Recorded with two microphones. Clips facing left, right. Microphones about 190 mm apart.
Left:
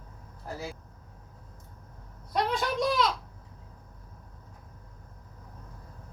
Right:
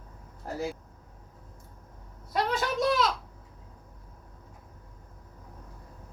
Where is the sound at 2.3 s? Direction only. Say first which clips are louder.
Even; centre (ahead or behind).